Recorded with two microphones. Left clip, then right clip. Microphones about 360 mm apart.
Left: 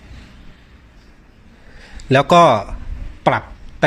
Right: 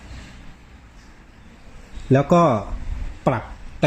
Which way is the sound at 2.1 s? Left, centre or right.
Left.